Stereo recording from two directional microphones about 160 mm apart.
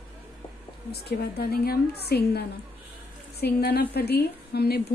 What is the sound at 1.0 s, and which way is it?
A woman's voice, 80° left.